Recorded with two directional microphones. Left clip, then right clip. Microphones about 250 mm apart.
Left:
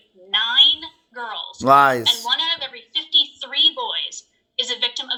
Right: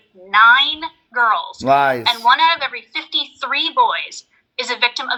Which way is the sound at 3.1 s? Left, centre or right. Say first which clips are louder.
Left 1 dB; right.